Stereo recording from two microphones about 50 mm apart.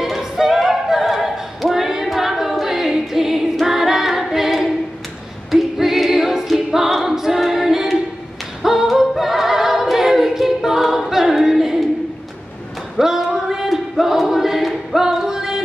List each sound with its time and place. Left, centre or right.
0.0 s a capella: centre
8.6 s music: centre
13.0 s choir: centre